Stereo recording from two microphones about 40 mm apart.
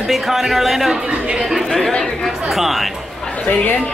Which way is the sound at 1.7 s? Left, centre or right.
Centre.